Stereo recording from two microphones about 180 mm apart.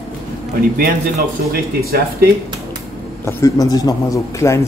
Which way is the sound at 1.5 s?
55° right (ahead or behind).